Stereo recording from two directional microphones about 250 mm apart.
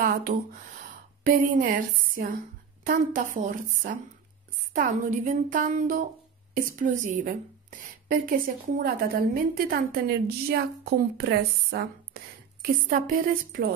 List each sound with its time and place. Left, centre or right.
0.0 s a woman's voice: right